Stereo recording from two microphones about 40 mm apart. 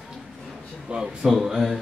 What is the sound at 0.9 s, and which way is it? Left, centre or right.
Speech, right.